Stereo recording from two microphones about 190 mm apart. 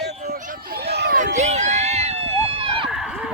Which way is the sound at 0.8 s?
60° right (ahead or behind).